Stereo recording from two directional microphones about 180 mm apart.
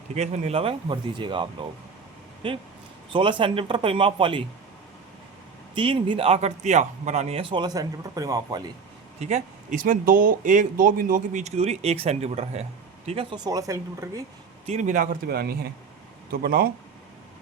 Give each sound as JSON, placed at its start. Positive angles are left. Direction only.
{"t": 0.1, "sound": "speech", "side_deg": -35}
{"t": 5.7, "sound": "speech", "side_deg": -30}
{"t": 9.2, "sound": "speech", "side_deg": -40}
{"t": 13.3, "sound": "speech", "side_deg": -20}
{"t": 14.7, "sound": "speech", "side_deg": -40}